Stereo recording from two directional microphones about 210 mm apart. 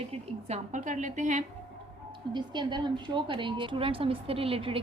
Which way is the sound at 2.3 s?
20° right (ahead or behind).